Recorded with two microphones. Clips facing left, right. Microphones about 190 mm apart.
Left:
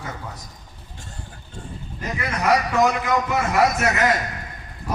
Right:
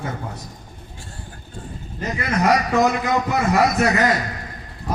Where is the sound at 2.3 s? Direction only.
35° right (ahead or behind).